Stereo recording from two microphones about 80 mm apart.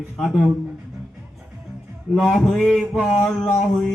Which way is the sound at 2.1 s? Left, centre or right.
Centre.